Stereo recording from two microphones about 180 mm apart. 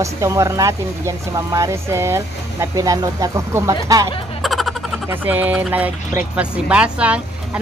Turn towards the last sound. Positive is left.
turn(degrees=-5)  # may be behind; listen again after turning